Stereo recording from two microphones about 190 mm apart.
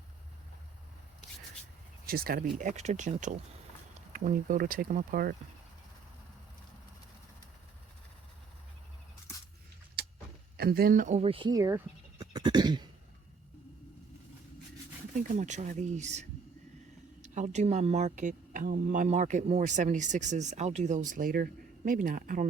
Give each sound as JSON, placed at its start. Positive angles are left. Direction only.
{"t": 2.0, "sound": "speech", "side_deg": -50}
{"t": 10.6, "sound": "speech", "side_deg": -55}
{"t": 12.2, "sound": "a sound", "side_deg": -20}
{"t": 15.1, "sound": "speech", "side_deg": -40}
{"t": 17.2, "sound": "speech", "side_deg": -40}